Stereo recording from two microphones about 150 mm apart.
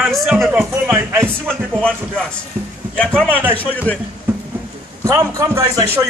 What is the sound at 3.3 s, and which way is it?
Speech, 10° right (ahead or behind).